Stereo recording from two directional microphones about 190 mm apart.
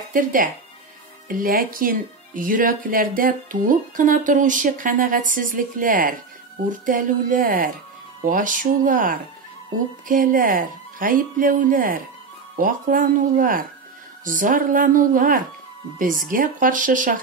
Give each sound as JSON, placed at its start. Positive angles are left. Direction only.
{"t": 0.1, "sound": "speech", "side_deg": -45}